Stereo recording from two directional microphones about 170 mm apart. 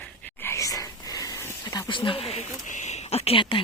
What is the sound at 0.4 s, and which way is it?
Whispering, 15° left (ahead or behind).